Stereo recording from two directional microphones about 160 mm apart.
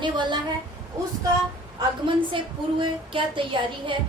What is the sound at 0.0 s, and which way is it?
Speech, 30° right (ahead or behind).